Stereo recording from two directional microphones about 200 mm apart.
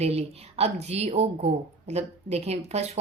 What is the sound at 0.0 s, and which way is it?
Speech, 30° right (ahead or behind).